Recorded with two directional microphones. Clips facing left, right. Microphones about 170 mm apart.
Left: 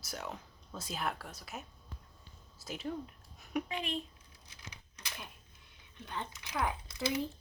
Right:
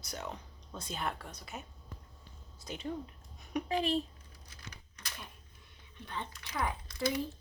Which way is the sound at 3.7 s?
35° right (ahead or behind).